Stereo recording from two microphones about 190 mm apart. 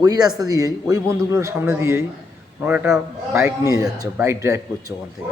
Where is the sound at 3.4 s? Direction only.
15° right (ahead or behind).